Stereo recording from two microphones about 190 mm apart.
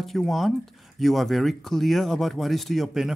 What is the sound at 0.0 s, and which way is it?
Speech, centre (ahead or behind).